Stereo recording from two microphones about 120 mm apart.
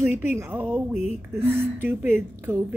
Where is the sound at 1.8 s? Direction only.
15° right (ahead or behind).